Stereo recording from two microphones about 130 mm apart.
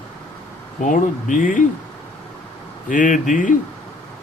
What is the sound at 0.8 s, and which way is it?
Speech, 75° left (ahead or behind).